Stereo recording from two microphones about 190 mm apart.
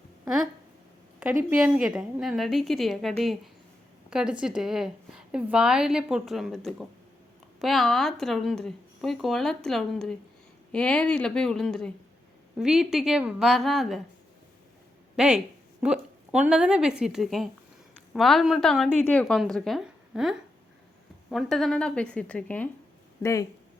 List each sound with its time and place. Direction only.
1.5 s a woman's voice: 5° right (ahead or behind)
15.1 s a woman's voice: 5° right (ahead or behind); by 23.5 s 15° left (ahead or behind)